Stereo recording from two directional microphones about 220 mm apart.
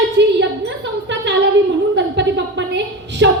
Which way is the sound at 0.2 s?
55° right (ahead or behind).